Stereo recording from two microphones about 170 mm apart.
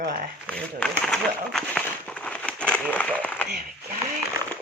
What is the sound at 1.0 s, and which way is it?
Speech, centre (ahead or behind).